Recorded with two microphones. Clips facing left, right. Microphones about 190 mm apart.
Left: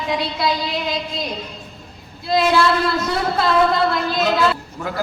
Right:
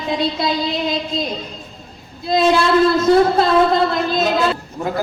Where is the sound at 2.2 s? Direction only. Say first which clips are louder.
Right 2 dB; 20° right (ahead or behind).